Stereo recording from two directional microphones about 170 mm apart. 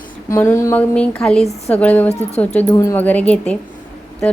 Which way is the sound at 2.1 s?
40° left (ahead or behind).